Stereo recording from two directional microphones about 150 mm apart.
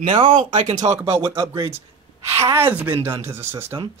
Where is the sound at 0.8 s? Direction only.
35° right (ahead or behind).